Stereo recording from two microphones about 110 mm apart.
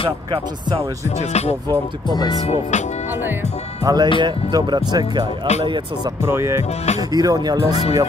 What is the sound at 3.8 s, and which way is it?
Speech, 35° right (ahead or behind).